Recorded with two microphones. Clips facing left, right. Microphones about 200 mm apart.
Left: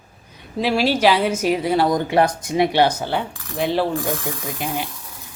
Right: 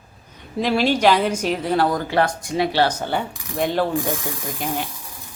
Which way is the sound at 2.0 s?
25° left (ahead or behind).